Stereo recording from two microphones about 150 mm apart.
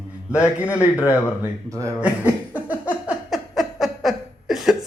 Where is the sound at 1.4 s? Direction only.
20° right (ahead or behind).